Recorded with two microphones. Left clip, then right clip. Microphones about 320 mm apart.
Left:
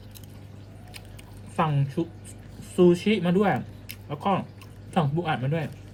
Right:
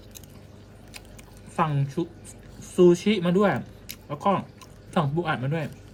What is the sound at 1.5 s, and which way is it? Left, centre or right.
A man's voice, centre.